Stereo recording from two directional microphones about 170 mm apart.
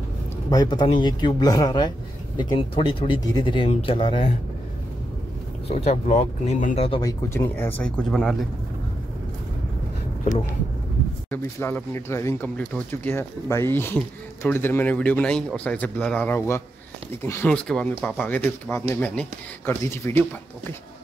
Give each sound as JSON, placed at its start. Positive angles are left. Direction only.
{"t": 0.5, "sound": "speech", "side_deg": 25}
{"t": 5.7, "sound": "speech", "side_deg": 40}
{"t": 7.0, "sound": "speech", "side_deg": 20}
{"t": 11.2, "sound": "speech", "side_deg": 10}